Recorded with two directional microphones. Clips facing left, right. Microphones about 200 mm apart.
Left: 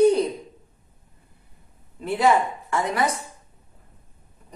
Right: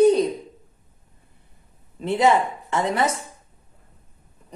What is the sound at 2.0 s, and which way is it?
A man's voice, 25° right (ahead or behind).